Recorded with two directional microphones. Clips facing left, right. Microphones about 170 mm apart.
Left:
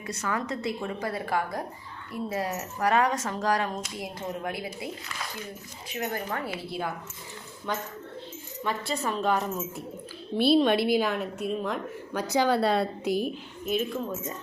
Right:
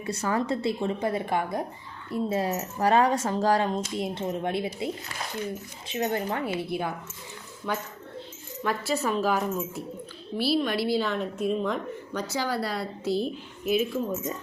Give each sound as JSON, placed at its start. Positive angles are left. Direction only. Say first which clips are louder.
{"t": 0.0, "sound": "speech", "louder": "right 4 dB", "side_deg": -30}
{"t": 7.7, "sound": "a woman's voice", "louder": "right 1 dB", "side_deg": -5}
{"t": 10.3, "sound": "speech", "louder": "left 4 dB", "side_deg": 20}
{"t": 12.3, "sound": "a woman's voice", "louder": "left 7 dB", "side_deg": 20}
{"t": 13.7, "sound": "a woman's voice", "louder": "right 3 dB", "side_deg": -5}